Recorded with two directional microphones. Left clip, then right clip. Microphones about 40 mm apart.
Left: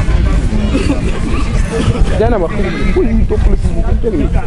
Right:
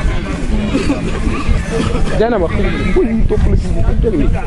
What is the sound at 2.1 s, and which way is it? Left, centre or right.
Speech, right.